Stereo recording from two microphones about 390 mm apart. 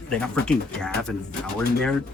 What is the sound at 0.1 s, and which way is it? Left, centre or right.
Speech, centre.